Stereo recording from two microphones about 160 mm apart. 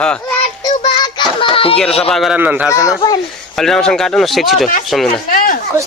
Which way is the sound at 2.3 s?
10° right (ahead or behind).